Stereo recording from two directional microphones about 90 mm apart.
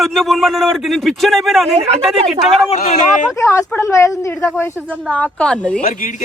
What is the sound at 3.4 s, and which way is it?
Speech, 35° left (ahead or behind).